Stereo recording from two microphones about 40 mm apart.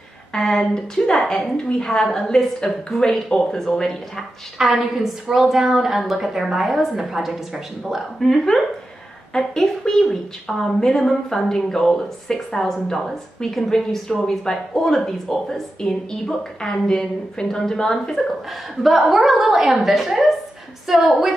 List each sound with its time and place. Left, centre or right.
0.3 s a woman's voice: centre
4.6 s a woman's voice: centre
8.2 s a woman's voice: centre
18.8 s a woman's voice: centre